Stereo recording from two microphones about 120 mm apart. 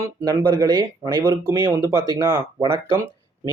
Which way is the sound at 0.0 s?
25° right (ahead or behind).